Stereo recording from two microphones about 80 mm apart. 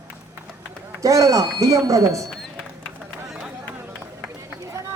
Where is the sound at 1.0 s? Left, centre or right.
Right.